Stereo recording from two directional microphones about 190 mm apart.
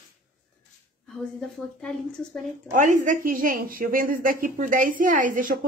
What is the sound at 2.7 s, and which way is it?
A woman's voice, 40° right (ahead or behind).